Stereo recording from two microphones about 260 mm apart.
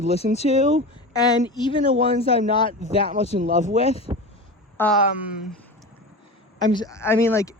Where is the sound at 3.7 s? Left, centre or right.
Left.